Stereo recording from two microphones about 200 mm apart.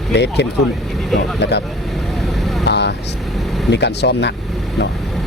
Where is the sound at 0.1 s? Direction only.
60° left (ahead or behind).